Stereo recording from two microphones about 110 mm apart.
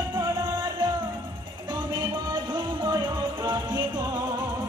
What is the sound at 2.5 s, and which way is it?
Music, 40° right (ahead or behind).